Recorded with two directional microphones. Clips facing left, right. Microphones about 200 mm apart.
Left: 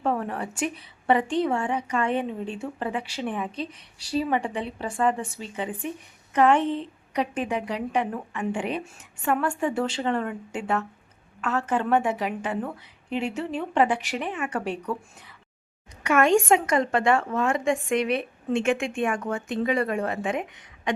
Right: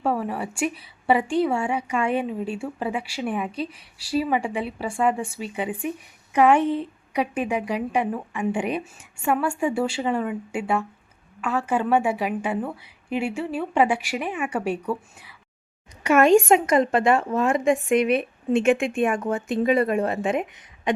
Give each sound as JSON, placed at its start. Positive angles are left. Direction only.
{"t": 0.0, "sound": "a woman's voice", "side_deg": -5}
{"t": 16.0, "sound": "a woman's voice", "side_deg": -20}